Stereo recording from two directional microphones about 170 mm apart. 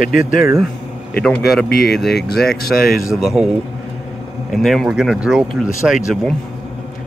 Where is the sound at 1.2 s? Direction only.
Centre (ahead or behind).